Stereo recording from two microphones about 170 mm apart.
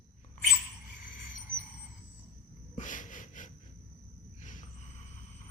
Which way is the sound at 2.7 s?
50° left (ahead or behind).